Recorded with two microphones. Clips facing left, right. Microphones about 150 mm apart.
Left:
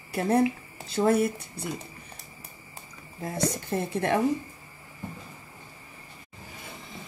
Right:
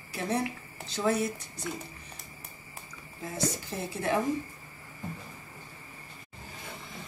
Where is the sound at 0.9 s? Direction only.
55° left (ahead or behind).